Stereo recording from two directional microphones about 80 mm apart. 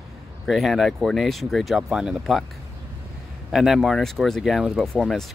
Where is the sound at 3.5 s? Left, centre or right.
Centre.